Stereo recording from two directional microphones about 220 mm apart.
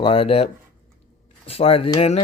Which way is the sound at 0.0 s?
25° left (ahead or behind).